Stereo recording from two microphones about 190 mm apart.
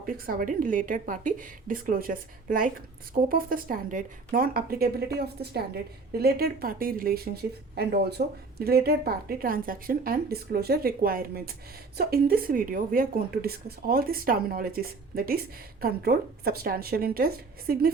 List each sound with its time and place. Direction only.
0.0 s a woman's voice: 45° right (ahead or behind)
8.2 s a woman's voice: 50° right (ahead or behind)